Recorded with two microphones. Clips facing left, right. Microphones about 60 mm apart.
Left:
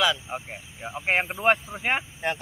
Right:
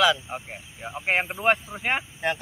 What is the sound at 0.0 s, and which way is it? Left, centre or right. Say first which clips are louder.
Speech: right 3 dB; centre.